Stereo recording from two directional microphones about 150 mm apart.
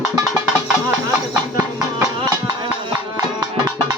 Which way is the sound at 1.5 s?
15° right (ahead or behind).